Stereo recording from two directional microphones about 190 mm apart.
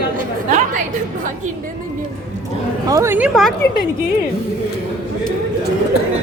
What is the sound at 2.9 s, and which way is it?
Speech, 15° right (ahead or behind).